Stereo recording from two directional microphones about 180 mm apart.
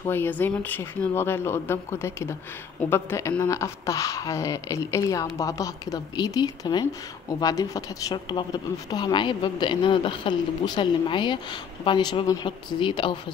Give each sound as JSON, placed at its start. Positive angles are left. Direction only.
{"t": 0.0, "sound": "speech", "side_deg": 10}